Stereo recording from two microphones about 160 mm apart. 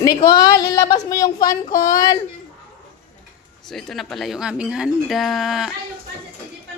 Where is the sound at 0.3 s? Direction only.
25° left (ahead or behind).